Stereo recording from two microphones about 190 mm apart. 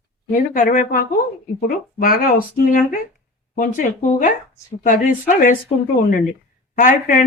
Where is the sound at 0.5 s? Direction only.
45° left (ahead or behind).